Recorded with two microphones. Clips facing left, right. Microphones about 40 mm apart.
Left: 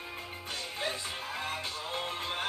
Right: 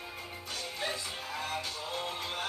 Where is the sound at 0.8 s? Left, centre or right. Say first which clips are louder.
Left 1 dB; left.